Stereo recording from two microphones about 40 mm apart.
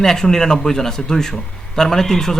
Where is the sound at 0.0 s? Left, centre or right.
Centre.